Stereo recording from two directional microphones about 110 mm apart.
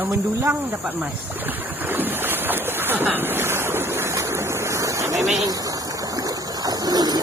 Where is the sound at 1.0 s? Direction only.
15° right (ahead or behind).